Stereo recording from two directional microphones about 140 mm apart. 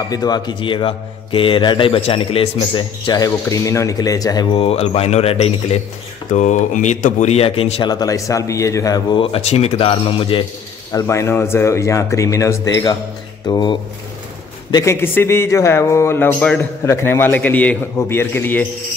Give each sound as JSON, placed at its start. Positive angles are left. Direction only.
{"t": 0.1, "sound": "a man's voice", "side_deg": 30}
{"t": 3.1, "sound": "speech", "side_deg": 25}
{"t": 6.3, "sound": "speech", "side_deg": 60}
{"t": 7.8, "sound": "speech", "side_deg": 30}
{"t": 9.2, "sound": "a man's voice", "side_deg": 45}
{"t": 10.9, "sound": "a man's voice", "side_deg": 20}